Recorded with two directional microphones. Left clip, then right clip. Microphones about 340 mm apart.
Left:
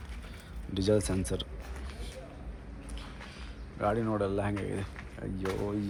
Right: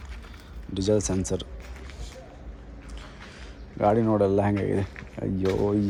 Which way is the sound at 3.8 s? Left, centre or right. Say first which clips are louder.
Right 9 dB; right.